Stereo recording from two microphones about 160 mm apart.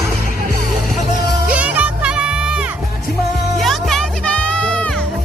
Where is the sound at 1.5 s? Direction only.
10° right (ahead or behind).